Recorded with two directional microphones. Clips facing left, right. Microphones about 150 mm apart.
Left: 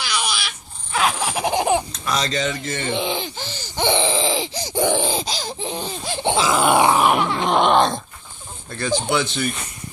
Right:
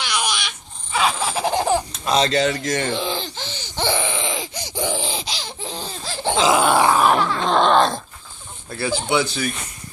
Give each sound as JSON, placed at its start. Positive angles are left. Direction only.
{"t": 0.0, "sound": "a sound", "side_deg": 0}
{"t": 0.9, "sound": "baby laughter", "side_deg": 10}
{"t": 2.0, "sound": "speech", "side_deg": -30}
{"t": 2.4, "sound": "speech", "side_deg": -75}
{"t": 2.9, "sound": "grunt", "side_deg": 20}
{"t": 3.2, "sound": "laughter", "side_deg": 10}
{"t": 3.9, "sound": "a sound", "side_deg": 30}
{"t": 4.7, "sound": "a sound", "side_deg": 60}
{"t": 5.6, "sound": "laughter", "side_deg": 20}
{"t": 6.7, "sound": "grunt", "side_deg": 15}
{"t": 8.7, "sound": "speech", "side_deg": -10}